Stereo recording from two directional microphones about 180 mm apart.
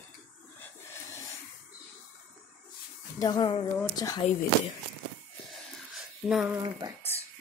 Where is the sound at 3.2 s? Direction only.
25° left (ahead or behind).